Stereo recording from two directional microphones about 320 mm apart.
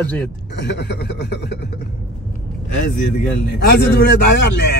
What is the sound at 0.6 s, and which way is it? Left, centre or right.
Speech, left.